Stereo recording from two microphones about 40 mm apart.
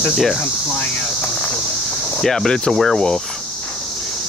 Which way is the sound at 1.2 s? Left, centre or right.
Left.